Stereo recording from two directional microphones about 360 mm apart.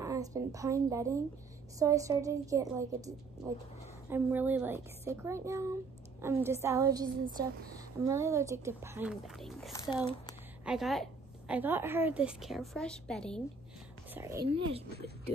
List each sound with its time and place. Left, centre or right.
0.0 s a woman's voice: centre
10.6 s a woman's voice: centre
14.1 s speech: centre
14.9 s speech: right